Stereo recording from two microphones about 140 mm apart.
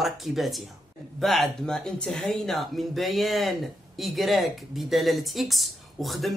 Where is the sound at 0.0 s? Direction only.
Centre (ahead or behind).